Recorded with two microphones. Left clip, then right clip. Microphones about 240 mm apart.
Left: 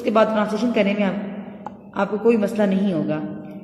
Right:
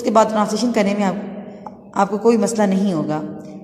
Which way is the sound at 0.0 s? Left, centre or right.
Centre.